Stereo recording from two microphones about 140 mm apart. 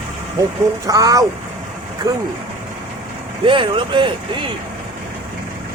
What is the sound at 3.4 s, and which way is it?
Speech, 40° right (ahead or behind).